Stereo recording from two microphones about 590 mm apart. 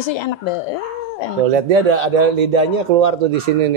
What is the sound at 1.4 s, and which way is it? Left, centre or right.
A man's voice, right.